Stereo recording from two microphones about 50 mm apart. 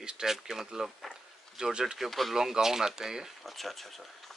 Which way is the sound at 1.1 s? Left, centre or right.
Centre.